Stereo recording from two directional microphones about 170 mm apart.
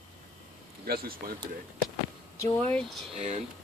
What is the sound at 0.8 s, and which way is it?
Speech, 60° right (ahead or behind).